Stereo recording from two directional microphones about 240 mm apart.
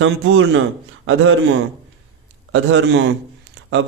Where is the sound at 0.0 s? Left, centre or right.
Right.